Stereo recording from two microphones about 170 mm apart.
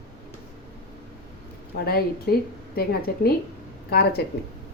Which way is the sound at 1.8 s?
65° left (ahead or behind).